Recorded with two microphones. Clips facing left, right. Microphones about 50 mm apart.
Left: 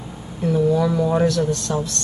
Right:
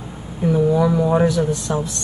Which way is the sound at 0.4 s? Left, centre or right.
Centre.